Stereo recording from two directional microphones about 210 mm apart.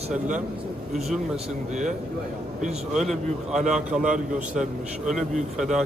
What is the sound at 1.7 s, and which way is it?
Speech, 35° right (ahead or behind).